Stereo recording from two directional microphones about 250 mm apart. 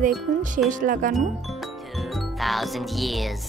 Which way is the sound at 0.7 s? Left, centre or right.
Right.